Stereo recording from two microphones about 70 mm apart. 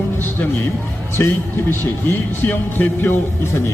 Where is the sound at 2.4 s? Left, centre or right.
Left.